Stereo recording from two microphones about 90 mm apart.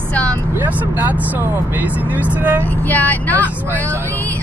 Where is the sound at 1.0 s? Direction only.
20° right (ahead or behind).